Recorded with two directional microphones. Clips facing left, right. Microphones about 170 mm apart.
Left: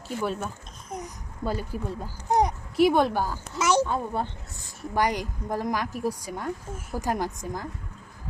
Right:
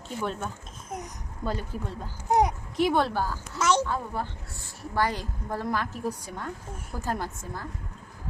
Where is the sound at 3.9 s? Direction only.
20° left (ahead or behind).